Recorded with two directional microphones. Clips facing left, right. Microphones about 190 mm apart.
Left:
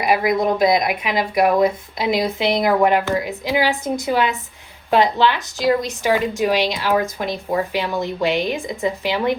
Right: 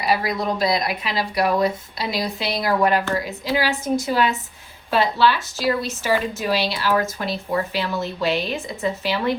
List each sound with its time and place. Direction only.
0.0 s a woman's voice: 20° left (ahead or behind)